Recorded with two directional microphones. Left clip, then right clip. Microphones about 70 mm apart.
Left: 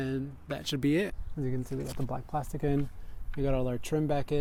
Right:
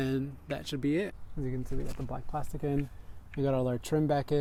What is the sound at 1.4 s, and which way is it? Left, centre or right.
Speech, left.